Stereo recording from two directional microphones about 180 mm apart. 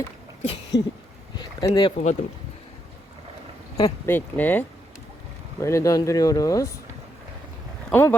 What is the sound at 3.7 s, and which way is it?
Speech, 15° left (ahead or behind).